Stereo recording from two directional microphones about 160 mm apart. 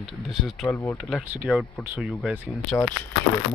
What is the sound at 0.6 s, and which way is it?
Speech, 15° left (ahead or behind).